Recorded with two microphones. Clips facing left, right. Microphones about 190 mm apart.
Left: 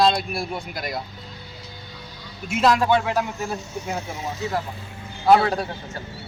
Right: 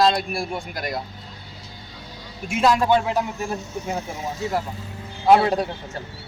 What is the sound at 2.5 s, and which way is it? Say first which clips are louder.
Speech: even; centre (ahead or behind).